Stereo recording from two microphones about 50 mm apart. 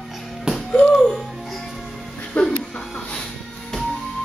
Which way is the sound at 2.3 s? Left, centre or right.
Left.